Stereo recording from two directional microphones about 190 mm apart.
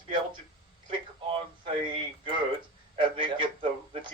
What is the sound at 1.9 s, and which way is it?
Speech, 25° right (ahead or behind).